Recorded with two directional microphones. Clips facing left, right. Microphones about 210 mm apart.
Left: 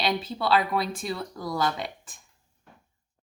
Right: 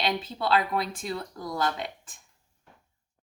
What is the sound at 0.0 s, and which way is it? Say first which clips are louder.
Speech: left 2 dB; 5° left (ahead or behind).